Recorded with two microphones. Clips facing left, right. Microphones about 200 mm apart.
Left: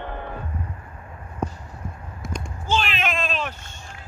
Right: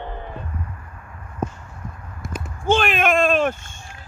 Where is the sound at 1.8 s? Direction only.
10° left (ahead or behind).